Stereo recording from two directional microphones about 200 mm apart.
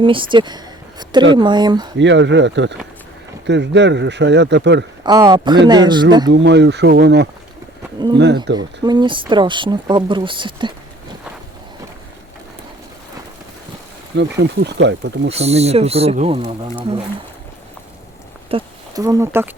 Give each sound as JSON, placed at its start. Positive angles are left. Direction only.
{"t": 0.0, "sound": "speech", "side_deg": -25}
{"t": 2.0, "sound": "speech", "side_deg": -65}
{"t": 5.0, "sound": "speech", "side_deg": -20}
{"t": 6.3, "sound": "speech", "side_deg": -60}
{"t": 8.5, "sound": "speech", "side_deg": -20}
{"t": 14.2, "sound": "speech", "side_deg": -60}
{"t": 15.3, "sound": "speech", "side_deg": -30}
{"t": 18.5, "sound": "speech", "side_deg": -15}